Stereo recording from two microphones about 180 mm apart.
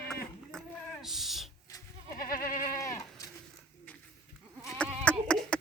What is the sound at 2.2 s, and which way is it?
Goat, 50° left (ahead or behind).